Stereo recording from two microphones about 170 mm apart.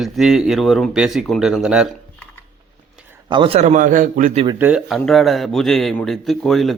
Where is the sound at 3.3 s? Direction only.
30° right (ahead or behind); by 4.4 s 50° right (ahead or behind).